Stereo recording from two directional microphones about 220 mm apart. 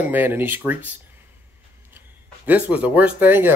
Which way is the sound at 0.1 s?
10° right (ahead or behind).